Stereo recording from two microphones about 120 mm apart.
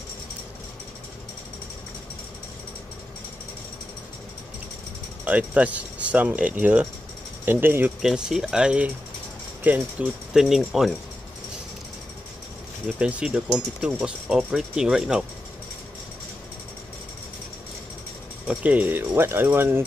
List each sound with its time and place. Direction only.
5.2 s speech: 10° right (ahead or behind)
8.0 s speech: 5° right (ahead or behind)
13.0 s speech: 10° right (ahead or behind)
18.5 s speech: 10° right (ahead or behind)